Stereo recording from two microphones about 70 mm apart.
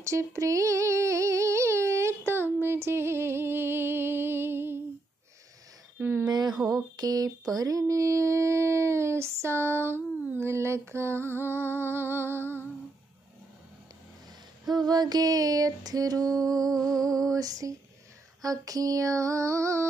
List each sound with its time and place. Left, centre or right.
0.0 s female singing: right
5.9 s speech: right
6.2 s speech: right
6.5 s a sound: centre
7.0 s female singing: right
7.9 s female singing: right
14.7 s female singing: right
18.4 s a sound: right